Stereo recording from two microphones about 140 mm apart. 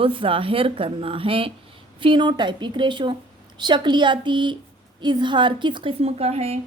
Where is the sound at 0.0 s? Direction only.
40° right (ahead or behind).